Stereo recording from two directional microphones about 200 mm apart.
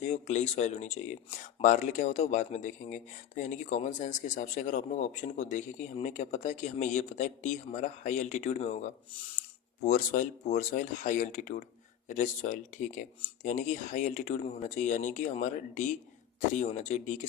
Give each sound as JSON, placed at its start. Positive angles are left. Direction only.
{"t": 0.0, "sound": "speech", "side_deg": 35}